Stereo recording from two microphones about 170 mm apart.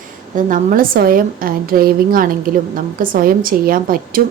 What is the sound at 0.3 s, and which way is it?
A woman's voice, 50° right (ahead or behind).